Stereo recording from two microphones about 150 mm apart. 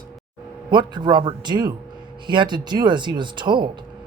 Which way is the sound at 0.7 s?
30° right (ahead or behind).